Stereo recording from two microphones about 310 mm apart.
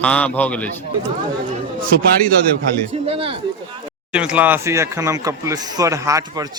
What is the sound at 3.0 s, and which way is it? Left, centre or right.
Speech, centre.